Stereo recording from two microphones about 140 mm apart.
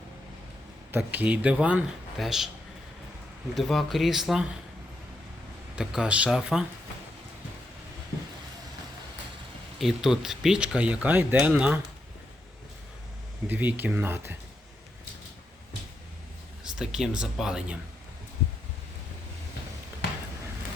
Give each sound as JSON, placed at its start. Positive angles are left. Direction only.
{"t": 0.9, "sound": "speech", "side_deg": -15}
{"t": 3.5, "sound": "speech", "side_deg": 0}
{"t": 5.7, "sound": "speech", "side_deg": -5}
{"t": 9.7, "sound": "speech", "side_deg": 0}
{"t": 13.5, "sound": "speech", "side_deg": -10}
{"t": 16.6, "sound": "speech", "side_deg": -5}